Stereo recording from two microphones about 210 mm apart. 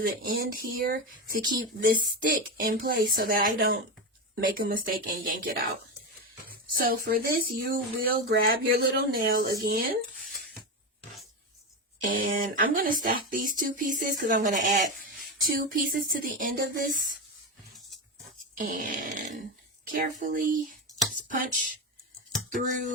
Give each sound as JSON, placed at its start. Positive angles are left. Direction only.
{"t": 0.0, "sound": "speech", "side_deg": -45}
{"t": 6.8, "sound": "speech", "side_deg": -45}
{"t": 12.0, "sound": "speech", "side_deg": -40}
{"t": 18.5, "sound": "speech", "side_deg": -40}